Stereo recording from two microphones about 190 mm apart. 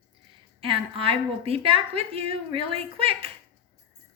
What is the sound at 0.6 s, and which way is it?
A woman's voice, 30° right (ahead or behind).